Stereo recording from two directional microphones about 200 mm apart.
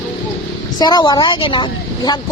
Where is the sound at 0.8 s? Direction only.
20° left (ahead or behind).